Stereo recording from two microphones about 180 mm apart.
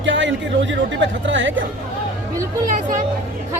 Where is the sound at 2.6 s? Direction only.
45° right (ahead or behind).